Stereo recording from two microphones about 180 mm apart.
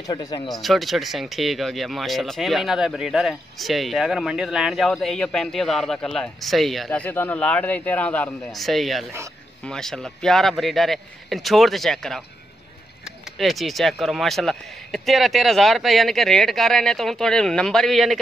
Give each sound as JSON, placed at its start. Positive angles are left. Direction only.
{"t": 0.0, "sound": "speech", "side_deg": 20}
{"t": 0.5, "sound": "speech", "side_deg": 0}